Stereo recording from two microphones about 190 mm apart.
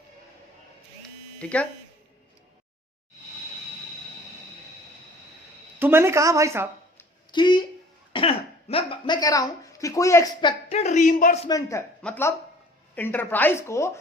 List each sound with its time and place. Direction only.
1.4 s speech: 5° left (ahead or behind)
5.8 s speech: 10° right (ahead or behind)
7.3 s speech: 25° left (ahead or behind)
10.7 s a woman's voice: 35° left (ahead or behind)
11.4 s a man's voice: 20° left (ahead or behind)